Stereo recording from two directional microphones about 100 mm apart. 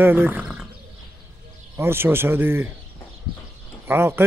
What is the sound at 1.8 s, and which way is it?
Speech, 25° right (ahead or behind).